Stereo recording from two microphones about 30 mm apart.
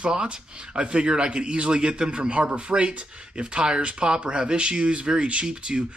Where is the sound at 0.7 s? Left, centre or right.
Right.